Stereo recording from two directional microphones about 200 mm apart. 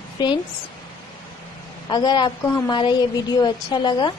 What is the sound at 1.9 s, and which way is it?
A woman's voice, 20° left (ahead or behind).